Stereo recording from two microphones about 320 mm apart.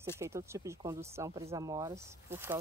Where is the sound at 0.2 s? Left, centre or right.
Centre.